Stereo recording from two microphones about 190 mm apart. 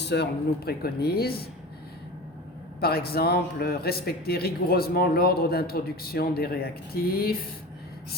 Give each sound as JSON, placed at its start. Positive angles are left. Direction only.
{"t": 0.0, "sound": "speech", "side_deg": 65}
{"t": 2.8, "sound": "speech", "side_deg": 55}